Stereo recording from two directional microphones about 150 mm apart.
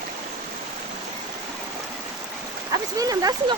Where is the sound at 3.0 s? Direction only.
25° right (ahead or behind).